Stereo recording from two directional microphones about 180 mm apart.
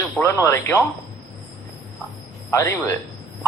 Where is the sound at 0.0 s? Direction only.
15° left (ahead or behind).